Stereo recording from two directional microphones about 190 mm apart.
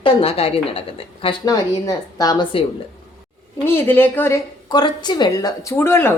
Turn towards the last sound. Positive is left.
turn(degrees=10)  # may be behind; listen again after turning